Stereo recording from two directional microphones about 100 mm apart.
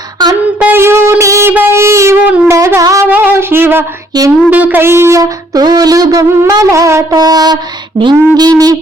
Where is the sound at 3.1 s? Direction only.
20° right (ahead or behind).